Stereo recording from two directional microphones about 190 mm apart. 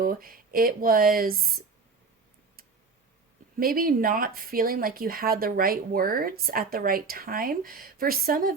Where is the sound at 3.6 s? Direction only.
50° right (ahead or behind).